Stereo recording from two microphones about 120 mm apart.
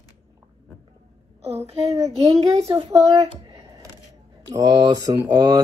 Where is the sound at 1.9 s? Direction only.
25° right (ahead or behind).